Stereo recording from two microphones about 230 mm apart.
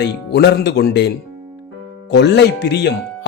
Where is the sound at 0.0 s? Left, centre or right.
Left.